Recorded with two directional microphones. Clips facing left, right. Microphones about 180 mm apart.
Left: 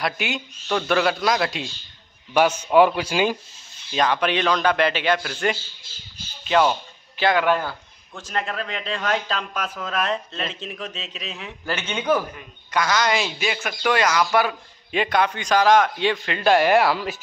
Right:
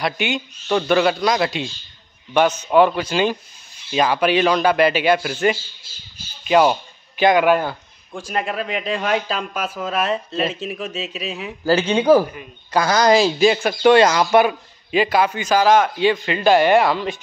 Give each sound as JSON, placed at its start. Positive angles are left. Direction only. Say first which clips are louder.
{"t": 0.0, "sound": "a man's voice", "louder": "right 4 dB", "side_deg": 0}
{"t": 3.9, "sound": "a man's voice", "louder": "right 4 dB", "side_deg": -5}
{"t": 11.6, "sound": "speech", "louder": "right 10 dB", "side_deg": -35}
{"t": 14.9, "sound": "a man's voice", "louder": "right 4 dB", "side_deg": -5}